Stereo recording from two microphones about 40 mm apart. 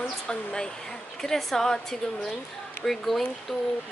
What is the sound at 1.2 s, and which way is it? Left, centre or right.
Speech, centre.